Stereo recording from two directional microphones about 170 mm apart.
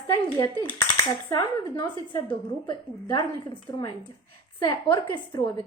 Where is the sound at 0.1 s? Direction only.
20° left (ahead or behind).